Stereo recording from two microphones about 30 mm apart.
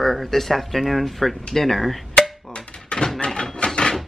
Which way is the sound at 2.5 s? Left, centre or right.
Left.